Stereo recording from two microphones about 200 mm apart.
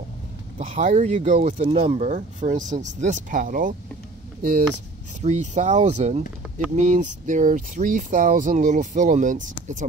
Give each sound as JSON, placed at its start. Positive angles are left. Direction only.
{"t": 0.6, "sound": "speech", "side_deg": -35}